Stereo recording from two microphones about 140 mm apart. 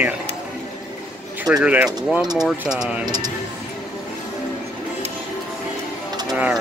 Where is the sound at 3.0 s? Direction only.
30° right (ahead or behind).